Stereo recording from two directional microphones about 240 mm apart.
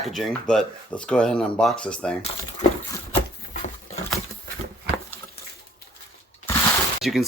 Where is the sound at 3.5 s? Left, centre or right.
Left.